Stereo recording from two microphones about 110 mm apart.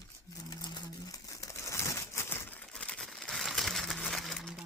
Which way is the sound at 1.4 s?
25° left (ahead or behind).